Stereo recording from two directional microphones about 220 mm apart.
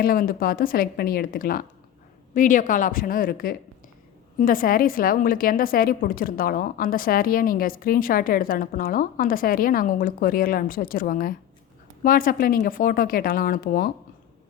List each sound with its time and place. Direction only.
0.0 s a woman's voice: 40° left (ahead or behind)